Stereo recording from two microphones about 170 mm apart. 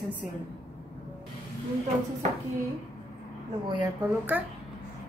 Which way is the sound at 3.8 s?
15° right (ahead or behind).